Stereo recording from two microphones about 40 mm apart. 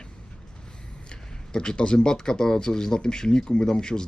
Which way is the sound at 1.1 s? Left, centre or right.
Left.